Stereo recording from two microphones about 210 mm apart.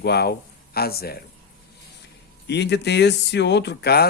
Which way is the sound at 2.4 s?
55° left (ahead or behind).